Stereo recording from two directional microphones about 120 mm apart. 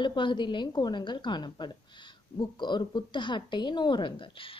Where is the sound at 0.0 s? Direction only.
40° left (ahead or behind).